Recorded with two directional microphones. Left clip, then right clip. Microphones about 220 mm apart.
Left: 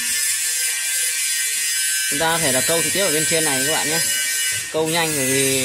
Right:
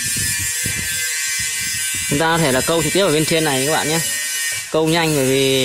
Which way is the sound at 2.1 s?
45° right (ahead or behind).